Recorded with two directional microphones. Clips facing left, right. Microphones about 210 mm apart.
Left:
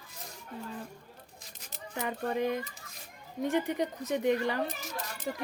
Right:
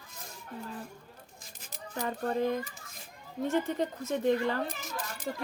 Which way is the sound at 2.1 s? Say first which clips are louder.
Right 1 dB; 15° left (ahead or behind).